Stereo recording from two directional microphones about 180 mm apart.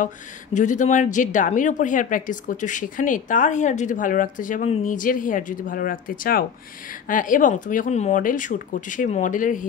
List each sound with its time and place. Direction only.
0.0 s a woman's voice: 45° left (ahead or behind)